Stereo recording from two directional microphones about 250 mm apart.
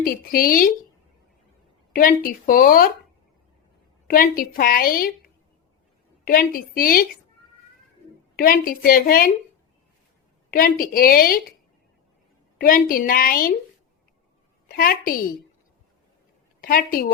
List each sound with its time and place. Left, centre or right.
0.0 s a woman's voice: left
1.9 s a woman's voice: left
4.1 s a woman's voice: left
8.4 s a woman's voice: left
10.5 s a woman's voice: left
12.5 s a woman's voice: left
14.8 s a woman's voice: left
16.6 s a woman's voice: left